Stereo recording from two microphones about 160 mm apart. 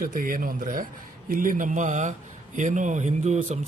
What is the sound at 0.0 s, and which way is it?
A man's voice, 60° right (ahead or behind).